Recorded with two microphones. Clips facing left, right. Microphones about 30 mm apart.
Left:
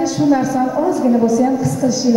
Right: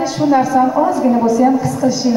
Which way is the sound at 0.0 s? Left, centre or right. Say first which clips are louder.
Right 1 dB; right.